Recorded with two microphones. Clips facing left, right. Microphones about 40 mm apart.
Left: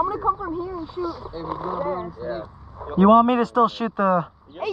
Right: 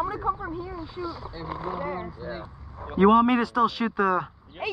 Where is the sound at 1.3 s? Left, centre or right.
Centre.